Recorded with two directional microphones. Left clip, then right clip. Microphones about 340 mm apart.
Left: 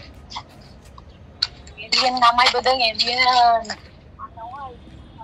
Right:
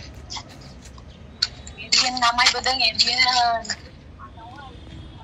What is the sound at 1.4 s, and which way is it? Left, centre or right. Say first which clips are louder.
A woman's voice: even; centre.